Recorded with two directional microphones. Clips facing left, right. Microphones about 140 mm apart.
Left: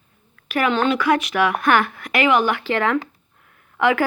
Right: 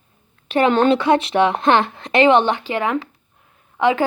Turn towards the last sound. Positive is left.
turn(degrees=-20)  # may be behind; listen again after turning